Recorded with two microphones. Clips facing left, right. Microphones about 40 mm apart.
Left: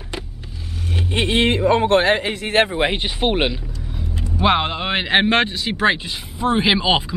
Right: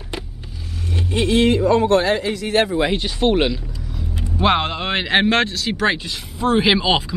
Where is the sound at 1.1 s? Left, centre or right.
Left.